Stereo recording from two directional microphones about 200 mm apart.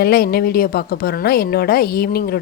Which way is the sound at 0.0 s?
50° left (ahead or behind).